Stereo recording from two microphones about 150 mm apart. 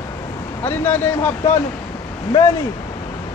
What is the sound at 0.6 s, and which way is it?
Speech, 15° left (ahead or behind).